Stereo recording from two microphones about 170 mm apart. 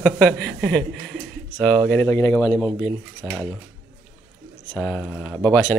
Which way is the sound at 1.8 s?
15° left (ahead or behind).